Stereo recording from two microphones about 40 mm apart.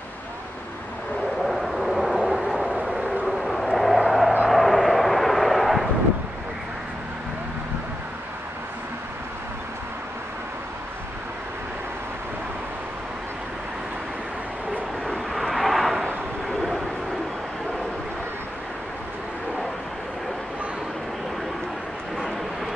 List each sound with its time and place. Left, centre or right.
1.4 s vehicle: centre
15.3 s vehicle: centre